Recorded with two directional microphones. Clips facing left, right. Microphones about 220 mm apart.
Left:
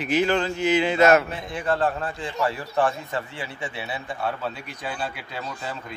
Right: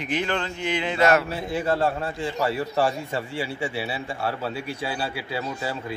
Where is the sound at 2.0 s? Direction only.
25° right (ahead or behind).